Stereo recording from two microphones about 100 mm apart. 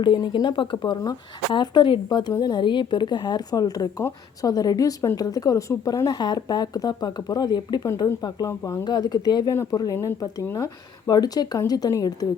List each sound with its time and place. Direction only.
0.0 s speech: 45° left (ahead or behind)
8.4 s speech: 30° left (ahead or behind)
8.8 s speech: 45° left (ahead or behind)